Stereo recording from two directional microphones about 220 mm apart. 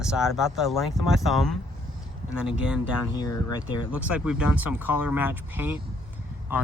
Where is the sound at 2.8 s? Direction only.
20° left (ahead or behind).